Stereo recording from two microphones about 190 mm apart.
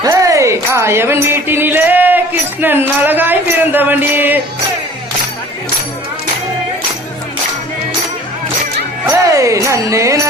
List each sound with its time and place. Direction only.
0.0 s music: 15° right (ahead or behind)
9.0 s music: 15° right (ahead or behind)